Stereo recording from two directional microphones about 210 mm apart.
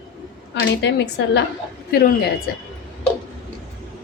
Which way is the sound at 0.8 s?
55° left (ahead or behind).